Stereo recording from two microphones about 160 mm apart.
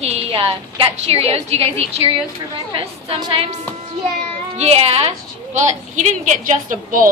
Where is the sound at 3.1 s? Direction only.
35° right (ahead or behind).